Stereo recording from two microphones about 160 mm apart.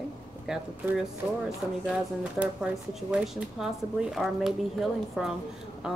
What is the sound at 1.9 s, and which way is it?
Speech, 5° right (ahead or behind).